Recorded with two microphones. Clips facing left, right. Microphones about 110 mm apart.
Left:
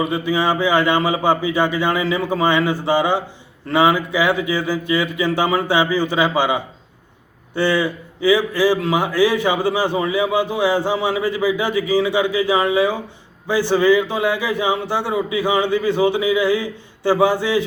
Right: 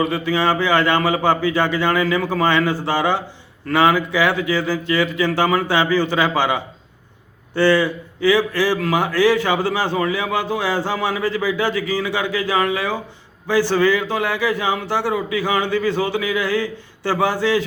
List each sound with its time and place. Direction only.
0.0 s a man's voice: 15° left (ahead or behind)